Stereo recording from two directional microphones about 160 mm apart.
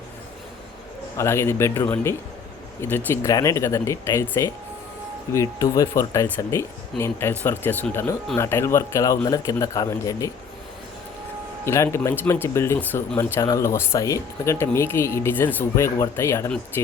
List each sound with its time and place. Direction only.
1.1 s a man's voice: 15° left (ahead or behind)
11.6 s speech: 15° left (ahead or behind)